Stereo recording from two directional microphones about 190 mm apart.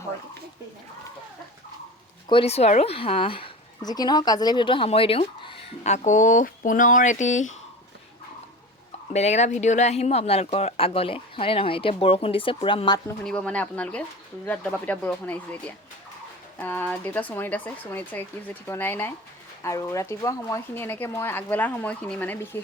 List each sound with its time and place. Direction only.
2.3 s speech: 30° left (ahead or behind)
9.1 s speech: 35° left (ahead or behind)
13.2 s speech: 5° left (ahead or behind)